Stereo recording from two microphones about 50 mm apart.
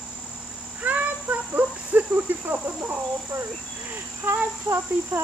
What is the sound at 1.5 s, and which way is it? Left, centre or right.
Cricket, right.